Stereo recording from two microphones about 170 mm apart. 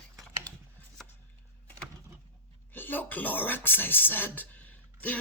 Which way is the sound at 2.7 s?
10° left (ahead or behind).